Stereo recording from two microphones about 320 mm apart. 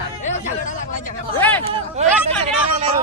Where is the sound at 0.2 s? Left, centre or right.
Left.